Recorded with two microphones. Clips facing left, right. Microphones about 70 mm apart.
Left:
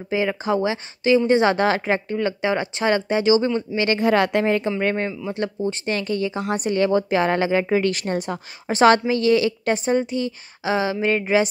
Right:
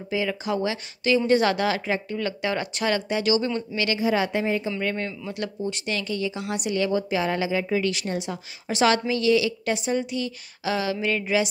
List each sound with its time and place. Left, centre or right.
0.1 s a woman's voice: left
4.0 s a woman's voice: left
4.6 s speech: left